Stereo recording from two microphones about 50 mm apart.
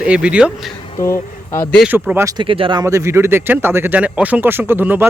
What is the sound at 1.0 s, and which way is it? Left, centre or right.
Speech, left.